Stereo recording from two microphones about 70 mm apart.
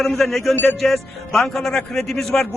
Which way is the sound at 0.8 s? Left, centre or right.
Centre.